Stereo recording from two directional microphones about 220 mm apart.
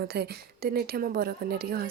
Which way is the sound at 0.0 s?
45° right (ahead or behind).